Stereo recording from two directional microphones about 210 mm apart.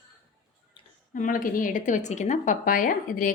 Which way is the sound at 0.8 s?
20° left (ahead or behind).